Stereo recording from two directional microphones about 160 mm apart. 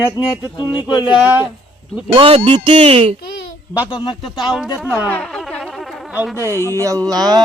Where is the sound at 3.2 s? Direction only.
75° left (ahead or behind).